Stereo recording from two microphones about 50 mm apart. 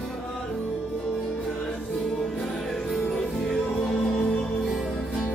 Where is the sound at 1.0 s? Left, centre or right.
Centre.